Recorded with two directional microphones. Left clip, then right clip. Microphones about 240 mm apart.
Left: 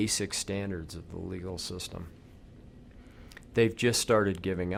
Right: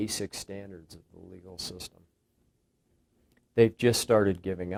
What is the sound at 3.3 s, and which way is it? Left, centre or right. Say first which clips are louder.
Speech: right 3 dB; left.